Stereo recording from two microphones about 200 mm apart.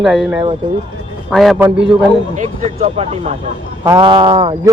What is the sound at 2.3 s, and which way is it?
Speech, 35° right (ahead or behind).